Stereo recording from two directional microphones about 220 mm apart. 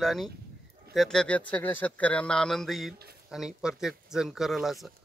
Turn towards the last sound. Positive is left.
turn(degrees=0)  # may be behind; listen again after turning